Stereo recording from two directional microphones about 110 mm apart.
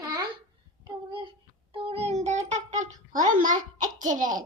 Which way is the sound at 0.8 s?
45° right (ahead or behind).